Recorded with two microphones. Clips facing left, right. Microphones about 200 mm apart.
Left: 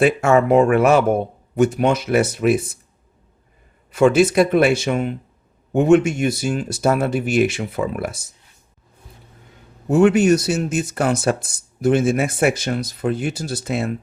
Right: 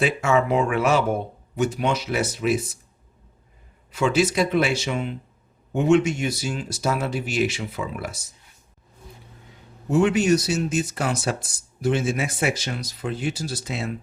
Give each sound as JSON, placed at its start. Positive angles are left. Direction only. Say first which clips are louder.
{"t": 0.0, "sound": "speech", "louder": "left 6 dB", "side_deg": 55}
{"t": 3.9, "sound": "speech", "louder": "left 7 dB", "side_deg": 55}
{"t": 9.9, "sound": "speech", "louder": "left 5 dB", "side_deg": 55}